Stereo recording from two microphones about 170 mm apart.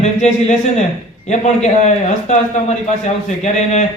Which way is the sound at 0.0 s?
45° left (ahead or behind).